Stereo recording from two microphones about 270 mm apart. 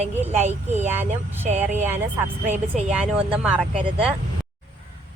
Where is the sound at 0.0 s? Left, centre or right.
Right.